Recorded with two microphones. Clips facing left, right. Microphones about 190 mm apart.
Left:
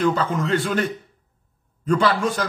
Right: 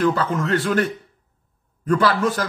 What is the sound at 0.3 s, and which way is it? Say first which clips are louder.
Speech: right 1 dB; centre (ahead or behind).